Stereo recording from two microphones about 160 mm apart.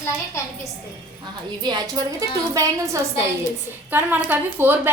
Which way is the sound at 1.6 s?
25° right (ahead or behind).